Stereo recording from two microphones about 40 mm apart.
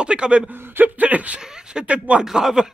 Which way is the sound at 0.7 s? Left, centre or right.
Right.